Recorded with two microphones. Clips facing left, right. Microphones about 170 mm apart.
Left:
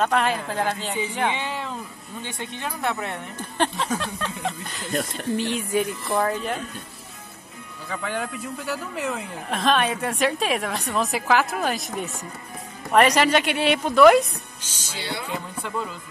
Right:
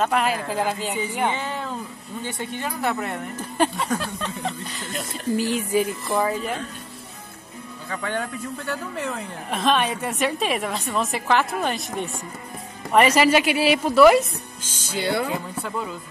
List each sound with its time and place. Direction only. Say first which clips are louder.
0.0 s speech: even; 5° right (ahead or behind)
7.9 s speech: right 1 dB; 5° left (ahead or behind)
14.7 s speech: right 8 dB; 50° right (ahead or behind)
15.3 s speech: right 1 dB; centre (ahead or behind)